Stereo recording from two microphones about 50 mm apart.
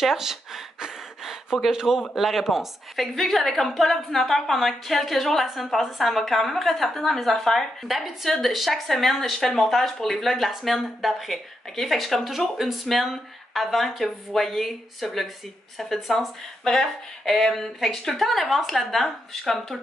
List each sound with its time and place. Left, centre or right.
0.0 s a woman's voice: centre